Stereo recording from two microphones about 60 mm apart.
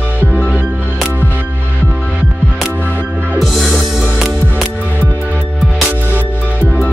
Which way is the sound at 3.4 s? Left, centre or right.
Centre.